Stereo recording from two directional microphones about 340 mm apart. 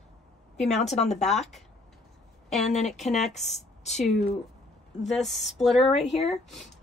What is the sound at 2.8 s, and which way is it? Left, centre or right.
Speech, centre.